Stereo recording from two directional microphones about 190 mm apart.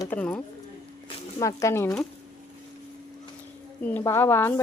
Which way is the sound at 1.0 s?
15° left (ahead or behind).